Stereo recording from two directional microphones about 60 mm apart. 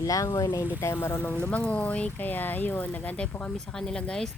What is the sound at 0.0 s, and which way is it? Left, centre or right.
Speech, left.